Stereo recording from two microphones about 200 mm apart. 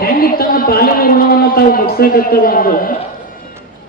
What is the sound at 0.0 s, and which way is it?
A man's voice, 50° left (ahead or behind).